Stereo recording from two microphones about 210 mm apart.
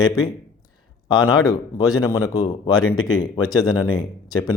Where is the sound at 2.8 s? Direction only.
85° left.